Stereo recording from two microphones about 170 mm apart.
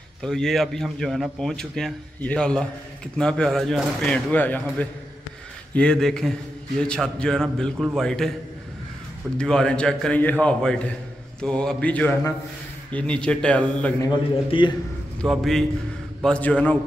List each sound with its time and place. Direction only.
0.2 s a man's voice: centre (ahead or behind)
9.4 s a man's voice: 5° left (ahead or behind)
14.1 s a man's voice: 30° left (ahead or behind)
15.2 s a man's voice: centre (ahead or behind)